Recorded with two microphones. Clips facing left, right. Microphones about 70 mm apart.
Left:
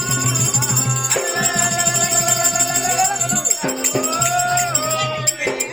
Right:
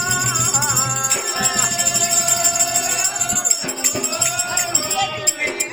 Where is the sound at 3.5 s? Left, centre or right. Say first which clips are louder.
Left 5 dB; left.